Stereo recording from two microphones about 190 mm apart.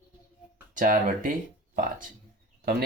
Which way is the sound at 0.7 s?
45° right (ahead or behind).